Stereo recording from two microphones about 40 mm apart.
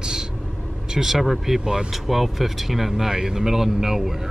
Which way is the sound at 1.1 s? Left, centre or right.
Centre.